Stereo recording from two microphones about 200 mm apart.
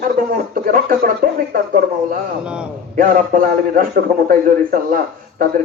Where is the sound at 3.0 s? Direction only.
45° right (ahead or behind).